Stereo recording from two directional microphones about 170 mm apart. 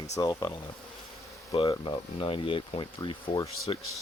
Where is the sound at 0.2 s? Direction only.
25° left (ahead or behind).